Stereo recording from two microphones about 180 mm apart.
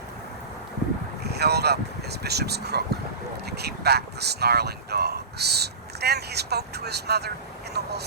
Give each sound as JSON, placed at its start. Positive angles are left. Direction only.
{"t": 1.2, "sound": "speech", "side_deg": -65}